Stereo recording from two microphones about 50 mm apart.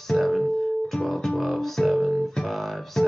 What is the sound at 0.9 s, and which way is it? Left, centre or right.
Guitar, centre.